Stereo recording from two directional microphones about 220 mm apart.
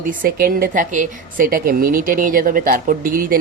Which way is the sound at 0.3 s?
40° right (ahead or behind).